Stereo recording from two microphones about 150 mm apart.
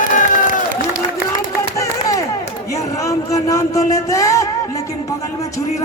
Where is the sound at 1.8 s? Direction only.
20° left (ahead or behind).